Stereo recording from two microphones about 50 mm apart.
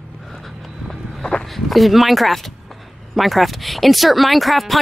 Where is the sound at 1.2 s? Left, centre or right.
Centre.